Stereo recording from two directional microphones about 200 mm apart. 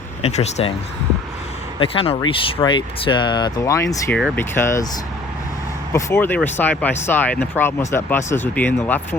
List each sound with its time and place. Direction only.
0.2 s speech: 35° left (ahead or behind)
1.8 s speech: 30° left (ahead or behind)
5.9 s speech: 10° left (ahead or behind)